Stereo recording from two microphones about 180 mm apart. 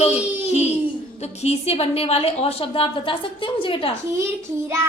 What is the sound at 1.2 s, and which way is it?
A woman's voice, 35° left (ahead or behind).